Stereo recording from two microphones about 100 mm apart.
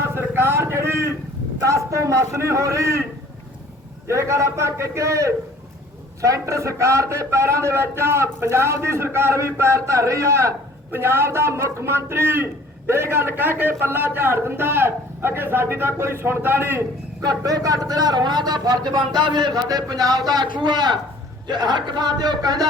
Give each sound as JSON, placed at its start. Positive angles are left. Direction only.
{"t": 0.0, "sound": "a sound", "side_deg": -25}
{"t": 1.6, "sound": "a man's voice", "side_deg": -30}
{"t": 4.1, "sound": "a man's voice", "side_deg": -30}
{"t": 17.2, "sound": "speech", "side_deg": -40}